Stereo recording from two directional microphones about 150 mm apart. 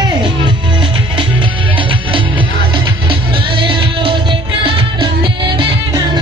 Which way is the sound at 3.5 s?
35° right (ahead or behind).